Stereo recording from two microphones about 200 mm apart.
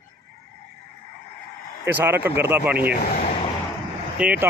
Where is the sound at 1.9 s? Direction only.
10° right (ahead or behind).